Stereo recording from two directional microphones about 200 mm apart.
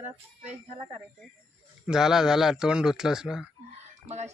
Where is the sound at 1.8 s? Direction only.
5° right (ahead or behind).